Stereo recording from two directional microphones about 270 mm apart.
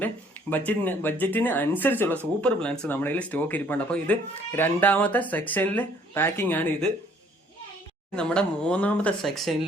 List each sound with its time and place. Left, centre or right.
0.0 s speech: centre
8.1 s speech: centre